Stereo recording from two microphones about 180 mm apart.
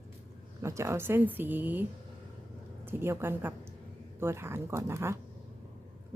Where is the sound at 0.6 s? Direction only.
15° right (ahead or behind).